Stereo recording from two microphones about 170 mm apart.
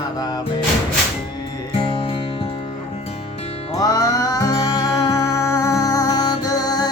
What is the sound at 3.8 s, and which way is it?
Music, 20° left (ahead or behind).